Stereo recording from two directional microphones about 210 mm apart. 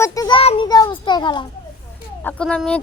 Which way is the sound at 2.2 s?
5° left (ahead or behind).